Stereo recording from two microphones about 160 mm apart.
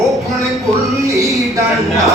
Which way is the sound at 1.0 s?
20° right (ahead or behind).